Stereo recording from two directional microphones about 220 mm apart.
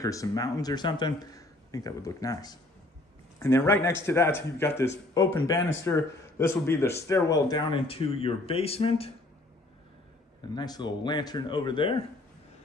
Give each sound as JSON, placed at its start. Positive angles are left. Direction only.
{"t": 0.0, "sound": "speech", "side_deg": 15}
{"t": 10.5, "sound": "speech", "side_deg": 20}